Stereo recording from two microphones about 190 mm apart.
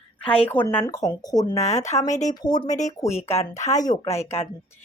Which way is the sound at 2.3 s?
20° left (ahead or behind).